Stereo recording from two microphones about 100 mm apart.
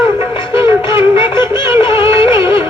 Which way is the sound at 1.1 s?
55° left (ahead or behind).